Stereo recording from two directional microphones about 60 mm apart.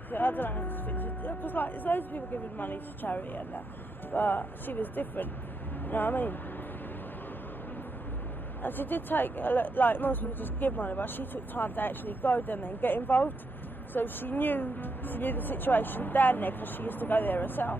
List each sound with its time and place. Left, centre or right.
0.1 s speech: left
8.6 s speech: left